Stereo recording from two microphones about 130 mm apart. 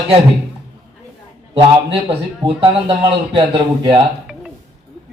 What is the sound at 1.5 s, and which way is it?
A man's voice, 40° right (ahead or behind).